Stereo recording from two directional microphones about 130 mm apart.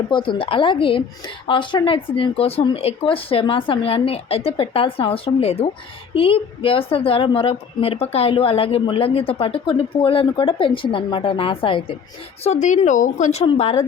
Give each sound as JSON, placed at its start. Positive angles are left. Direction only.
{"t": 0.1, "sound": "a woman's voice", "side_deg": 40}
{"t": 12.4, "sound": "speech", "side_deg": 60}
{"t": 13.5, "sound": "a woman's voice", "side_deg": 50}